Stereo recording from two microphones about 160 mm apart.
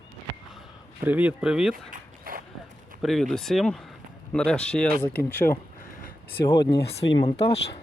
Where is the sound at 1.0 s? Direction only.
10° right (ahead or behind).